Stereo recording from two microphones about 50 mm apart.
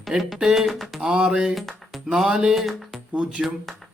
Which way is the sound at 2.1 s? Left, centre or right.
Centre.